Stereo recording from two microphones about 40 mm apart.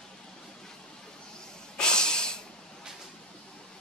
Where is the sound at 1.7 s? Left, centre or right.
Centre.